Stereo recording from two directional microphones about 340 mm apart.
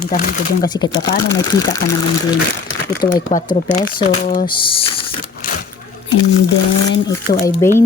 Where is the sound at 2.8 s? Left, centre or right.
Left.